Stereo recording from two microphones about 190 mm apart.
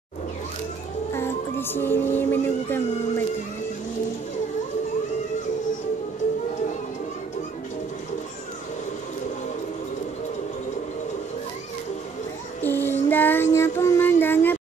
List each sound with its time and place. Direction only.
1.1 s music: 10° left (ahead or behind)
12.6 s child singing: 10° left (ahead or behind)